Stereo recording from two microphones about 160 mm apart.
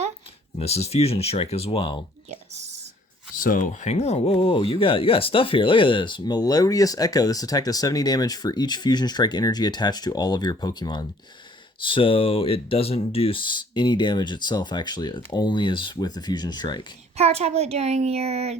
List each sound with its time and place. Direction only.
0.6 s speech: 40° left (ahead or behind)
3.3 s speech: 55° left (ahead or behind); by 16.8 s 25° left (ahead or behind)
17.2 s a woman's voice: 40° right (ahead or behind)